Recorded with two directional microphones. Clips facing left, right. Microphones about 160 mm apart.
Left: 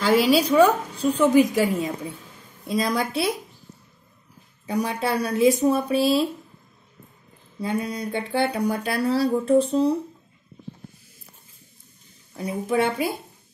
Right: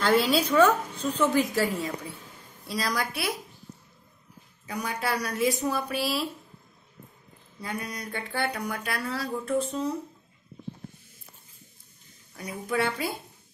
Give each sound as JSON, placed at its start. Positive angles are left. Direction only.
{"t": 0.5, "sound": "a woman's voice", "side_deg": 10}
{"t": 4.6, "sound": "speech", "side_deg": 30}
{"t": 7.6, "sound": "speech", "side_deg": 30}
{"t": 12.4, "sound": "speech", "side_deg": 25}